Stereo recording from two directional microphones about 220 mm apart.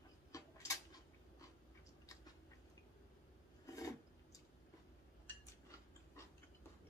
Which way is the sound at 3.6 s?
15° left (ahead or behind).